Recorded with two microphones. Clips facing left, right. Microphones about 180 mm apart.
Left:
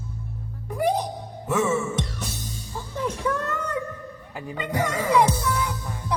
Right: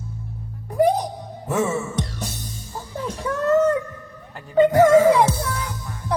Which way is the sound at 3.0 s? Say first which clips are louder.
Left 2 dB; 35° right (ahead or behind).